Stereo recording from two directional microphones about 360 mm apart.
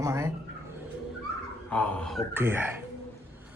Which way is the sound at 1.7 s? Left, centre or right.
Centre.